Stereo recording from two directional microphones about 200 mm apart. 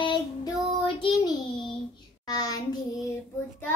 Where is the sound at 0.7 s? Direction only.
25° left (ahead or behind).